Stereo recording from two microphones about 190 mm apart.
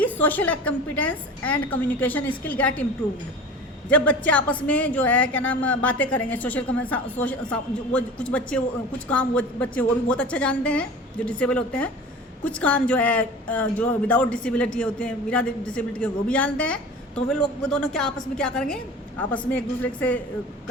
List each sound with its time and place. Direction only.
0.0 s a man's voice: 10° left (ahead or behind)
3.8 s a man's voice: 5° left (ahead or behind)